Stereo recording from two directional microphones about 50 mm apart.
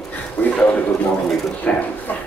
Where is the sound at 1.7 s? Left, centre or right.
Left.